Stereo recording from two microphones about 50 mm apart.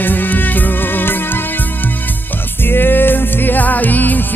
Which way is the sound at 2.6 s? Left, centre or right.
Left.